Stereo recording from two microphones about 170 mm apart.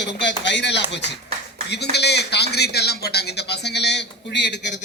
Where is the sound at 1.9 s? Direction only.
75° left (ahead or behind).